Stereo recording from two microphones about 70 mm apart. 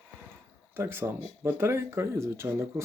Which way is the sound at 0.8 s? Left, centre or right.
Right.